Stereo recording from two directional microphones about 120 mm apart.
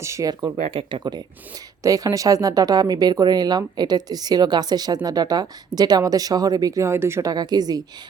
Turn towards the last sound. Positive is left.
turn(degrees=-30)  # may be behind; listen again after turning